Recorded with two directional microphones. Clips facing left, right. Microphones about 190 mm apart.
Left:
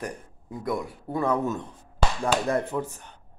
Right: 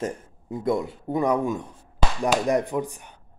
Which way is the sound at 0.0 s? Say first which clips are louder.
Right 5 dB; 25° right (ahead or behind).